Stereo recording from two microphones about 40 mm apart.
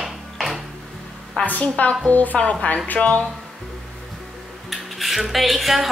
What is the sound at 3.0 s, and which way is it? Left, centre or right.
Speech, left.